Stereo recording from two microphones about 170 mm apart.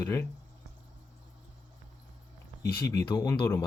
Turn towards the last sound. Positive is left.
turn(degrees=20)  # may be behind; listen again after turning